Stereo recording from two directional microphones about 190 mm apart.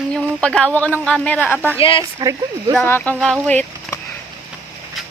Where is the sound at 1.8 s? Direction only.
30° left (ahead or behind).